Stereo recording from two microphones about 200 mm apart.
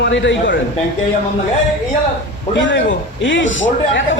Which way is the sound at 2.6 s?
65° left (ahead or behind).